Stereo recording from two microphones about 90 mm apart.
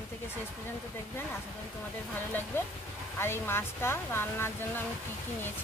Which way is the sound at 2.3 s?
20° left (ahead or behind).